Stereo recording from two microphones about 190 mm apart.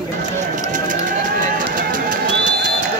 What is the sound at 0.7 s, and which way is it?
Bird, 45° right (ahead or behind).